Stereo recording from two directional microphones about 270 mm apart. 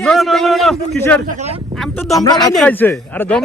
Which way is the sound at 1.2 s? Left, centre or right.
Right.